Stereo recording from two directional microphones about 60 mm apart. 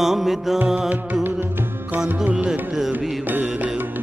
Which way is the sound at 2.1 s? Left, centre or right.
Centre.